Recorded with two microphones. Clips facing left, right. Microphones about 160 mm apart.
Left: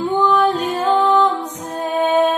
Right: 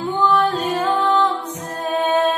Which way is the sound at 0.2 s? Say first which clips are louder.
Left 1 dB; 10° left (ahead or behind).